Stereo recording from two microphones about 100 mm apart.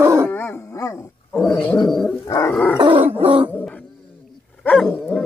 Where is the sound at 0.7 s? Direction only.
35° left (ahead or behind).